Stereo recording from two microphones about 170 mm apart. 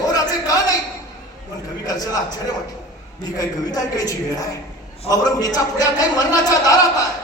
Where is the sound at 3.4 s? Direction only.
20° left (ahead or behind).